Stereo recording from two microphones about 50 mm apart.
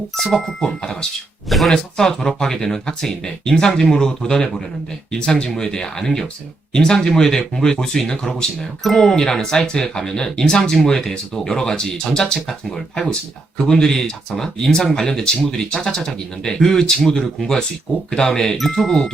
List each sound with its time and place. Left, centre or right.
0.2 s speech: centre
1.5 s speech: centre
1.7 s speech: centre